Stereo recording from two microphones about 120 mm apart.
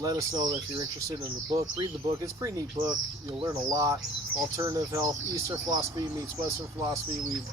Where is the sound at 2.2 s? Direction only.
30° right (ahead or behind).